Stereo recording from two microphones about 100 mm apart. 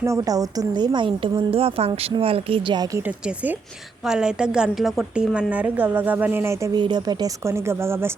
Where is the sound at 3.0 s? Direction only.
15° right (ahead or behind).